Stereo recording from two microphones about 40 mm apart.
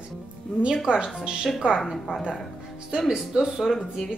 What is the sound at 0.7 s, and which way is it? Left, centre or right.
Speech, centre.